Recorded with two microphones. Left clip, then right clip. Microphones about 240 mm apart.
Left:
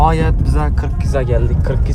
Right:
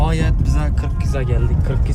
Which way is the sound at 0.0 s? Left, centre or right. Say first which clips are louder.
Left 8 dB; centre.